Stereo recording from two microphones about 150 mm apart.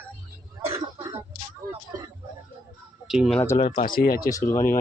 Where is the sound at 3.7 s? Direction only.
70° left (ahead or behind).